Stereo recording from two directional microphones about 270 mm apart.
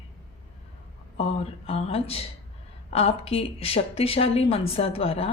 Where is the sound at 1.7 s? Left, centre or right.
Left.